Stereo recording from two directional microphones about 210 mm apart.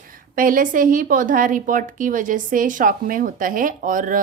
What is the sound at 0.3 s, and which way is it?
A woman's voice, 40° right (ahead or behind).